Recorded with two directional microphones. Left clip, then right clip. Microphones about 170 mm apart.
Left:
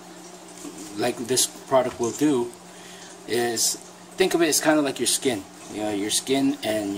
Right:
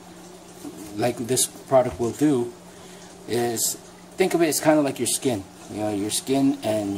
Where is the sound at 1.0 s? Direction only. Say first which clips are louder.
Even; centre (ahead or behind).